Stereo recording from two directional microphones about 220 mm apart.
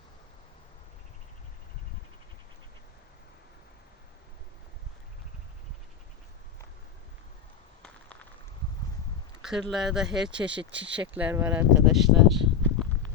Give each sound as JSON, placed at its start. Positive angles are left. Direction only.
{"t": 7.8, "sound": "a sound", "side_deg": 5}
{"t": 9.4, "sound": "speech", "side_deg": 0}
{"t": 10.7, "sound": "speech", "side_deg": -55}
{"t": 11.1, "sound": "speech", "side_deg": -5}